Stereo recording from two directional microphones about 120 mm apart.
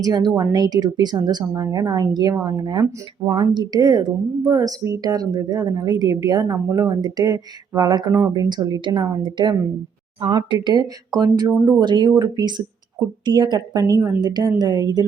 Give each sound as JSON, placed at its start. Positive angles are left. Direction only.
{"t": 0.0, "sound": "speech", "side_deg": -35}